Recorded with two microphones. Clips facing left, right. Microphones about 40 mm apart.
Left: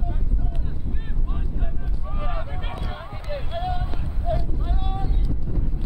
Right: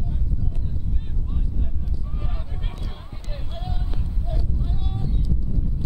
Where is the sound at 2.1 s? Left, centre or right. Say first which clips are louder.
Left 5 dB; left.